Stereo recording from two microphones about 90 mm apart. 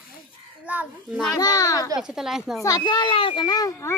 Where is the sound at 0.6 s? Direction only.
15° right (ahead or behind).